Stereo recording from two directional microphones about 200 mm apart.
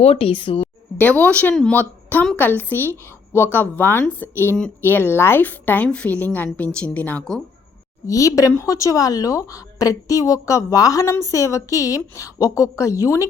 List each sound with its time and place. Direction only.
0.0 s a woman's voice: 30° left (ahead or behind)
0.9 s speech: 5° left (ahead or behind)
8.0 s speech: 15° left (ahead or behind)